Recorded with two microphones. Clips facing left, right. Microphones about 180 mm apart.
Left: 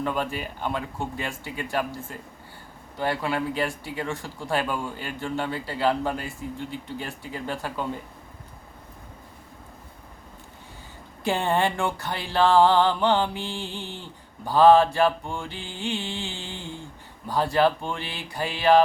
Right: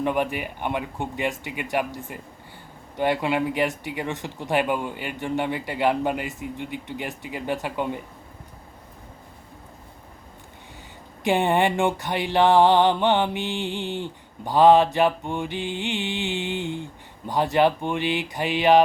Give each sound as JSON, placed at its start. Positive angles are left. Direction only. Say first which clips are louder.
{"t": 0.0, "sound": "speech", "louder": "right 4 dB", "side_deg": -15}
{"t": 11.2, "sound": "speech", "louder": "right 3 dB", "side_deg": -15}
{"t": 13.8, "sound": "speech", "louder": "right 9 dB", "side_deg": -65}
{"t": 14.4, "sound": "speech", "louder": "even", "side_deg": -15}
{"t": 15.8, "sound": "music", "louder": "right 3 dB", "side_deg": -20}
{"t": 16.6, "sound": "a sound", "louder": "right 8 dB", "side_deg": -70}
{"t": 17.2, "sound": "speech", "louder": "right 2 dB", "side_deg": -20}